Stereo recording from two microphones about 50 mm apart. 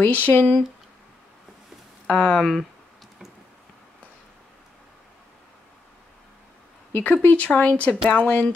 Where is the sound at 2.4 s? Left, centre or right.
Centre.